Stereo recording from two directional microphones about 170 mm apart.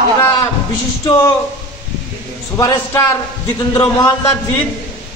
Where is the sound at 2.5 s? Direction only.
20° left (ahead or behind).